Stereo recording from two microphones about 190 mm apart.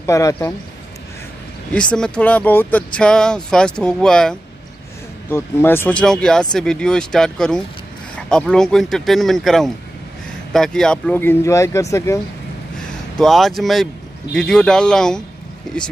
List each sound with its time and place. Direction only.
0.0 s speech: 15° left (ahead or behind)
1.7 s speech: 5° left (ahead or behind)
12.7 s a sound: centre (ahead or behind)
14.3 s speech: 5° left (ahead or behind)